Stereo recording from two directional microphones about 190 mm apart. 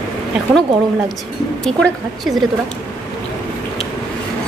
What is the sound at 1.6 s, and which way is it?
Speech, 5° left (ahead or behind).